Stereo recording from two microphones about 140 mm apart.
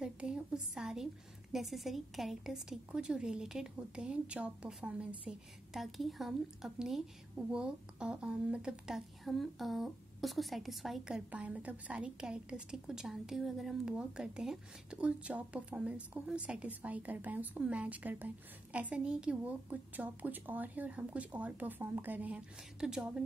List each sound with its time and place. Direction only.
0.0 s a woman's voice: 5° right (ahead or behind)